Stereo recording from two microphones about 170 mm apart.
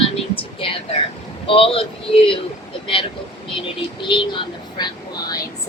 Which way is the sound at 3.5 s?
30° left (ahead or behind).